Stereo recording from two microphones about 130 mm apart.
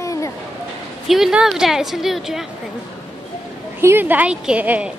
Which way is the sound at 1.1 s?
5° right (ahead or behind).